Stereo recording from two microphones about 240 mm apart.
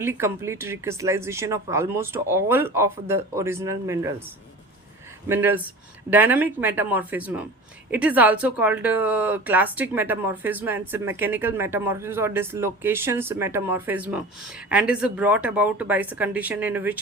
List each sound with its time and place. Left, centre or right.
0.0 s speech: centre
5.3 s speech: centre